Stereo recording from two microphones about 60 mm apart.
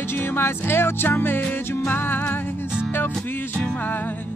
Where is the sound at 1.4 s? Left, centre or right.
Left.